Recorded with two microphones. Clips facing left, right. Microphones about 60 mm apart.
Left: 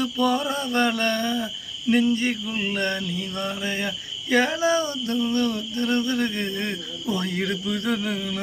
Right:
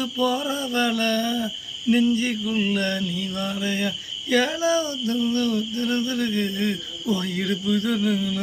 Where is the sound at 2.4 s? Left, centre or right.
Left.